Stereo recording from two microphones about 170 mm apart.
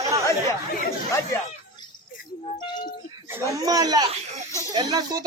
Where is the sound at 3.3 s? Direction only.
20° right (ahead or behind).